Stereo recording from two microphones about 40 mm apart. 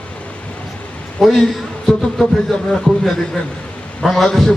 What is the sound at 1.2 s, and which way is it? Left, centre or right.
Speech, centre.